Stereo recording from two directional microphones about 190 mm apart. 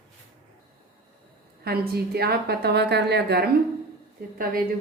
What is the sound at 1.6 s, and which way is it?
A woman's voice, 55° right (ahead or behind).